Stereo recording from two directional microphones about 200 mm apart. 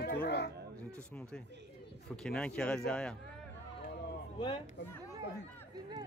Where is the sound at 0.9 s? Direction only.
5° left (ahead or behind).